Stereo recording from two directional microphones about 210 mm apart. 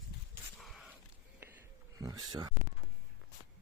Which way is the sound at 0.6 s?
Centre (ahead or behind).